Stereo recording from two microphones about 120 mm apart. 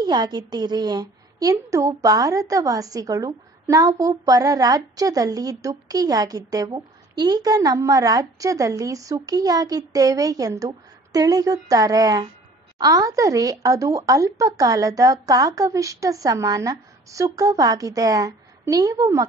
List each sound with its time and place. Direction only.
0.0 s a woman's voice: 35° right (ahead or behind)